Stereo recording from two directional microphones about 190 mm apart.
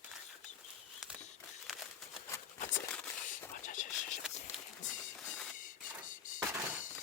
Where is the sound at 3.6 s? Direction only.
40° left (ahead or behind).